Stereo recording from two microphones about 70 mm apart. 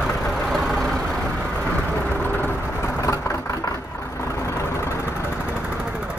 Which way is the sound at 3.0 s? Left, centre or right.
Left.